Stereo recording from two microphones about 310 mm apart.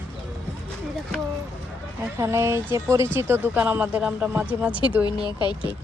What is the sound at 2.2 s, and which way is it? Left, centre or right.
Speech, centre.